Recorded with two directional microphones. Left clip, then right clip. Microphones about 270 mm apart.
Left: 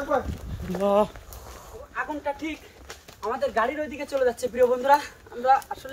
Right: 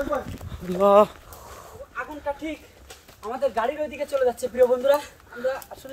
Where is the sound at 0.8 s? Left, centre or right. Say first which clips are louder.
Right 6 dB; centre.